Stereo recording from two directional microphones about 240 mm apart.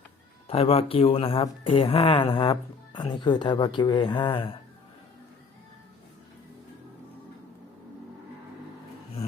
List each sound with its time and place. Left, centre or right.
0.4 s speech: left